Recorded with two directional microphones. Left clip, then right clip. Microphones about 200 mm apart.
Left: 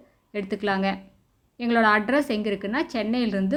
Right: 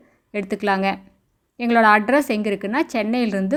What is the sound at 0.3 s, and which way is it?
Speech, 40° right (ahead or behind).